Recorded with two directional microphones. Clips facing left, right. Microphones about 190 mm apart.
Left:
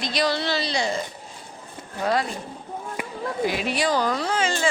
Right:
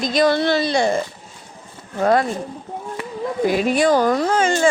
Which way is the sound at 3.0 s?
10° left (ahead or behind).